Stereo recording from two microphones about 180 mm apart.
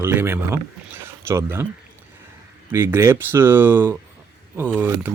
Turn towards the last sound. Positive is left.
turn(degrees=-10)  # may be behind; listen again after turning